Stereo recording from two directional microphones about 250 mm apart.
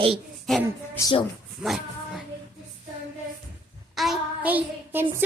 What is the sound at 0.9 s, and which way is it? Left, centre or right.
Speech, centre.